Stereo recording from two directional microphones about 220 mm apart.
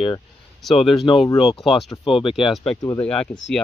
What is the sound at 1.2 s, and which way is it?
Speech, 25° left (ahead or behind).